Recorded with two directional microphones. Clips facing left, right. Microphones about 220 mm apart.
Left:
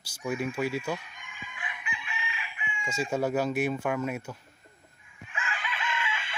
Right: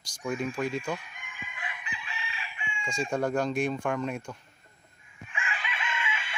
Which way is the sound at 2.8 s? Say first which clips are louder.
Even; 5° left (ahead or behind).